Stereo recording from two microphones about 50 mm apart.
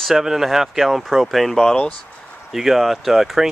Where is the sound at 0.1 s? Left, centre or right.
Centre.